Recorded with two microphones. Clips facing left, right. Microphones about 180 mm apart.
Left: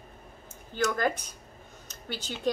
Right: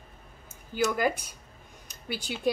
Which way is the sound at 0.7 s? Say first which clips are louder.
Right 1 dB; 10° right (ahead or behind).